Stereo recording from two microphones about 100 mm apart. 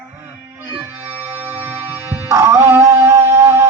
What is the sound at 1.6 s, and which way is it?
Music, 20° right (ahead or behind).